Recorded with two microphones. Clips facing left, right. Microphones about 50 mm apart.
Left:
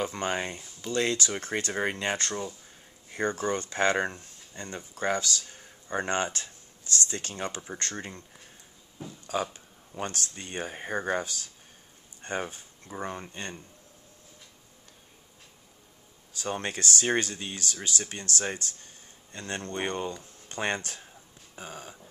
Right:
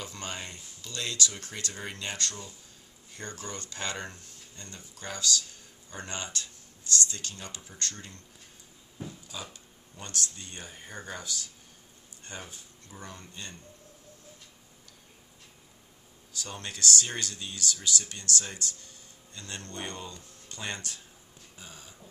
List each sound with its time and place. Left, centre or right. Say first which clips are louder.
0.0 s speech: left 9 dB; left
9.5 s a sound: left 3 dB; left
10.3 s speech: left 9 dB; left
16.3 s speech: left 7 dB; left